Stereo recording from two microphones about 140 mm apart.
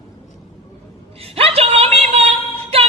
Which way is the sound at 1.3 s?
45° right (ahead or behind).